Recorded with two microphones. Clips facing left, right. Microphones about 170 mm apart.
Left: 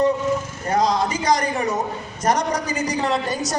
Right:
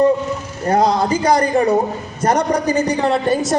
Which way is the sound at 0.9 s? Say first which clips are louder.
Right 5 dB; 30° right (ahead or behind).